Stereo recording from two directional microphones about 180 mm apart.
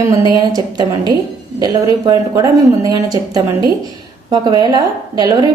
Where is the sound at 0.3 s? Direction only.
20° right (ahead or behind).